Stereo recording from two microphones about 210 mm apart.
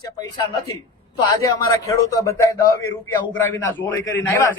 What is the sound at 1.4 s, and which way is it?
Speech, 15° left (ahead or behind).